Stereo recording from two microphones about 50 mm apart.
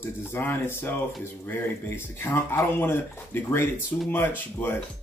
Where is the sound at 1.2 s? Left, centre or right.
Left.